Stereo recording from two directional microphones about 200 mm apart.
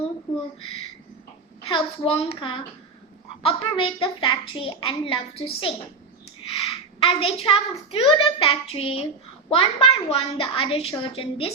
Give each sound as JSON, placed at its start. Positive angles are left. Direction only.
{"t": 1.6, "sound": "a child's voice", "side_deg": 30}